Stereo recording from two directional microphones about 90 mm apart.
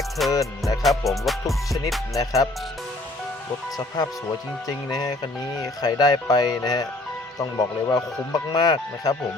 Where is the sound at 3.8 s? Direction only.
45° left (ahead or behind).